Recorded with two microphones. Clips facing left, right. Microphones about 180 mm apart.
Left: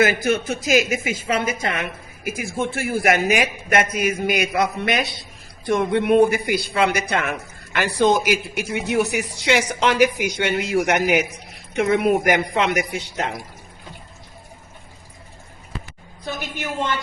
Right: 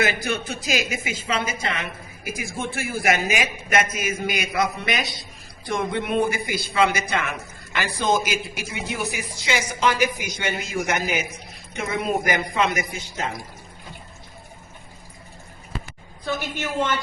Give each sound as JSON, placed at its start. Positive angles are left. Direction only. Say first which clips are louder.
{"t": 0.0, "sound": "a woman's voice", "louder": "left 6 dB", "side_deg": 50}
{"t": 16.2, "sound": "a woman's voice", "louder": "right 2 dB", "side_deg": 20}